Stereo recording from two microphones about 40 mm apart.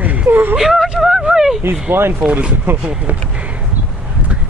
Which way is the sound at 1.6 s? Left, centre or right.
Right.